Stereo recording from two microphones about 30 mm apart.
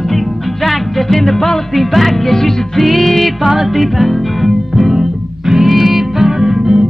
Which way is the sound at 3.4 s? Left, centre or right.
Centre.